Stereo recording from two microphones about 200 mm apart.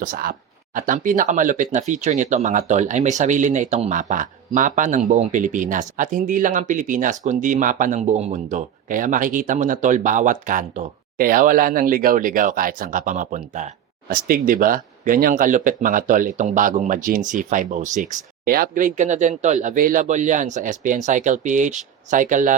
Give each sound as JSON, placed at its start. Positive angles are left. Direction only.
{"t": 0.0, "sound": "speech", "side_deg": -45}